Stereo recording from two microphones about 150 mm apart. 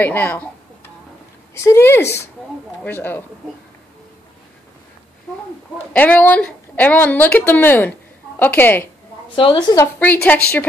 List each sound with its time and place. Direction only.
0.0 s a woman's voice: 10° left (ahead or behind)
1.5 s a woman's voice: 20° left (ahead or behind)
5.9 s a woman's voice: 10° left (ahead or behind)
9.3 s a woman's voice: 35° left (ahead or behind)
10.2 s a woman's voice: 10° left (ahead or behind)